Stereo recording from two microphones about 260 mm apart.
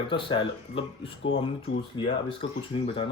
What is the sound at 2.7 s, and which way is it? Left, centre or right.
Speech, centre.